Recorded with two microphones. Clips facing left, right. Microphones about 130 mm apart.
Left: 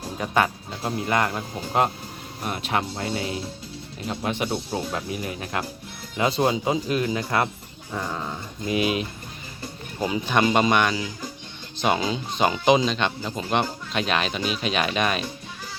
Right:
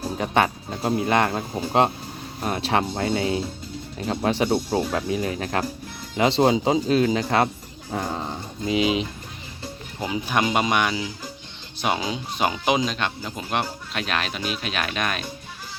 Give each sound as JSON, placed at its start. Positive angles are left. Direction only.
{"t": 0.2, "sound": "speech", "side_deg": -25}
{"t": 4.0, "sound": "speech", "side_deg": -45}
{"t": 6.1, "sound": "speech", "side_deg": -25}
{"t": 6.8, "sound": "speech", "side_deg": -90}
{"t": 7.3, "sound": "speech", "side_deg": -35}
{"t": 10.0, "sound": "speech", "side_deg": -10}